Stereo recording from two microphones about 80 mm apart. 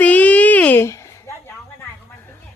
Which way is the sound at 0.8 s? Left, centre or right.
Left.